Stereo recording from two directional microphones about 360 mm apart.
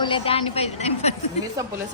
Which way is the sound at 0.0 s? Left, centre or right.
Centre.